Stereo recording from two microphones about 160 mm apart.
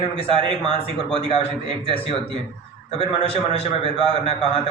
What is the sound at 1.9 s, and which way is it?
A man's voice, 35° left (ahead or behind).